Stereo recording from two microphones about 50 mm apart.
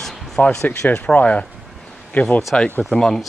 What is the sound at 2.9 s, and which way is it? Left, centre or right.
Speech, centre.